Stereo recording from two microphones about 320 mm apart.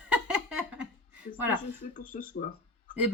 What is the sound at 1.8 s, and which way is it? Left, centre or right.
Speech, left.